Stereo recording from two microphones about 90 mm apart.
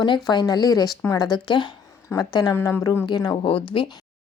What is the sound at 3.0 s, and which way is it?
Speech, 55° left (ahead or behind).